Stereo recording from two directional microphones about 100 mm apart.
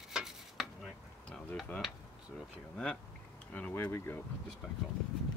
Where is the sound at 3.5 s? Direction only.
15° left (ahead or behind).